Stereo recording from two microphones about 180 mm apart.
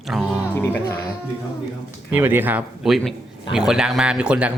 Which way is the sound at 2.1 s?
10° right (ahead or behind).